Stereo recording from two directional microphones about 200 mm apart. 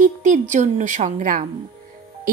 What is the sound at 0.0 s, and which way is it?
A woman's voice, 40° right (ahead or behind).